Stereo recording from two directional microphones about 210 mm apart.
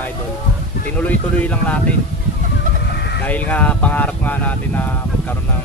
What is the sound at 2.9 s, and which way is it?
Fowl, 50° left (ahead or behind).